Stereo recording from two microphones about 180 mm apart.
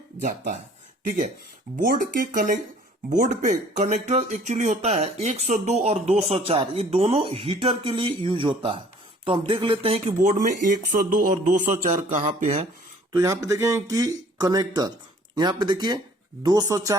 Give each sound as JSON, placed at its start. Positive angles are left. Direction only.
{"t": 0.2, "sound": "speech", "side_deg": -45}
{"t": 13.1, "sound": "speech", "side_deg": -20}